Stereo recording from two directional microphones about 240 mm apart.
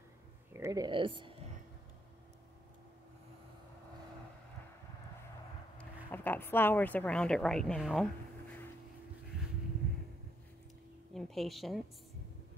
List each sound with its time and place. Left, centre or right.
0.5 s speech: centre
5.8 s speech: centre
11.1 s speech: centre